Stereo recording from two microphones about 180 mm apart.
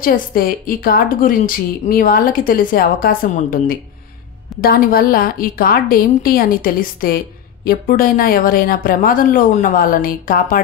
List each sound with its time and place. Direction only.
0.0 s a woman's voice: 50° left (ahead or behind)